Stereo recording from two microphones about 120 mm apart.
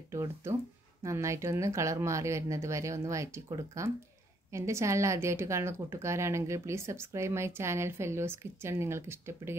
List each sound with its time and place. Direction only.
0.1 s a woman's voice: 25° right (ahead or behind)